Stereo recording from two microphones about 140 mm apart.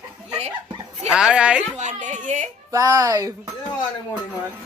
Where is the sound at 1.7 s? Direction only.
60° right (ahead or behind).